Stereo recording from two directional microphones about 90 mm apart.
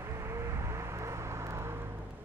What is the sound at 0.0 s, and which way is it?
Vehicle, 30° right (ahead or behind).